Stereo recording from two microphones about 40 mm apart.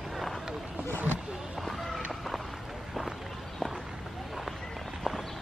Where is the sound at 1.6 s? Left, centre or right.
Centre.